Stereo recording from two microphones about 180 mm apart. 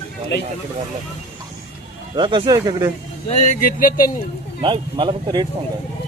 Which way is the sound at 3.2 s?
40° left (ahead or behind).